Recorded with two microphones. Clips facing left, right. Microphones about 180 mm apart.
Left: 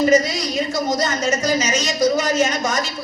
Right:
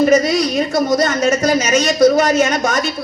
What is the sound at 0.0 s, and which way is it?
A man's voice, 60° right (ahead or behind).